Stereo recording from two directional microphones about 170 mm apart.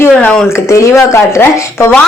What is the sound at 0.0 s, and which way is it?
A woman's voice, 10° left (ahead or behind).